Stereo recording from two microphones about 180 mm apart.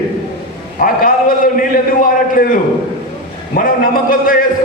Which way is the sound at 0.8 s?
50° left (ahead or behind).